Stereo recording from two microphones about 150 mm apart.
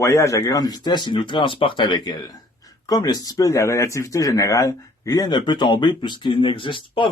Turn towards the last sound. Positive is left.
turn(degrees=35)  # may be behind; listen again after turning